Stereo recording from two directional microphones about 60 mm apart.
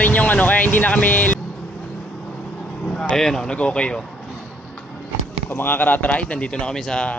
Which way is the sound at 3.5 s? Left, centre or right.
Left.